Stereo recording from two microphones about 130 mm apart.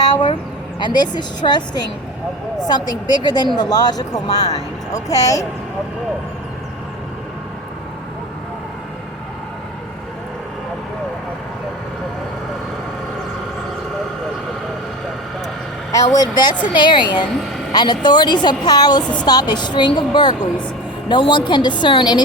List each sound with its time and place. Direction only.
0.8 s speech: 35° left (ahead or behind)
15.9 s speech: 25° left (ahead or behind)